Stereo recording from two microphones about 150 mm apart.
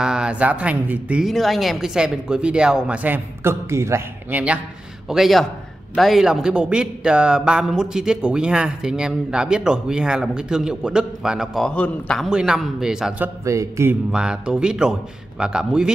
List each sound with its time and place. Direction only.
0.0 s a man's voice: 5° right (ahead or behind)
13.4 s speech: 20° right (ahead or behind)
14.1 s a man's voice: 5° right (ahead or behind)